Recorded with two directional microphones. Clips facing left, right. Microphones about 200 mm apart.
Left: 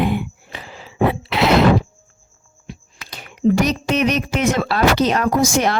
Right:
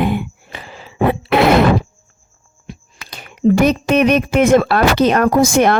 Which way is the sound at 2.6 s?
50° right (ahead or behind).